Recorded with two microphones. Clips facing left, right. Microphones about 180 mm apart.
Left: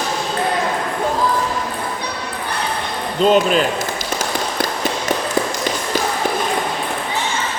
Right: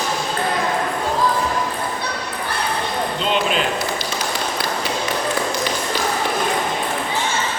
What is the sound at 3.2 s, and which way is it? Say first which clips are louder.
Speech: left 9 dB; 45° left (ahead or behind).